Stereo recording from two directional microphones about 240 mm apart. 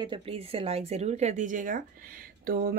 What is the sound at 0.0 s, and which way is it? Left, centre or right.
A woman's voice, right.